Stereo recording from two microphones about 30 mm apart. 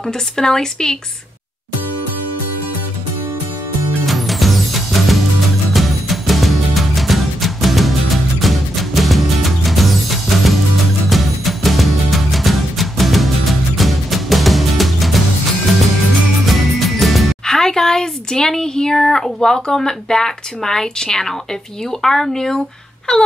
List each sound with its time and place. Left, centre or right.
0.0 s speech: centre
4.0 s music: centre
16.4 s music: centre
17.5 s a sound: centre
19.0 s speech: centre
23.1 s wail: left